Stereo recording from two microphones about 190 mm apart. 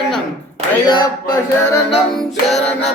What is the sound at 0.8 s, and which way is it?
Music, 20° left (ahead or behind).